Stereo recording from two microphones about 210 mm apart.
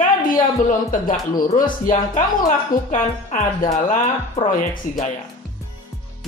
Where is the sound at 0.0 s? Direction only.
40° left (ahead or behind).